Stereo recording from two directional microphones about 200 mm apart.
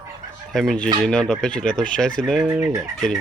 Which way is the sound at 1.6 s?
40° left (ahead or behind).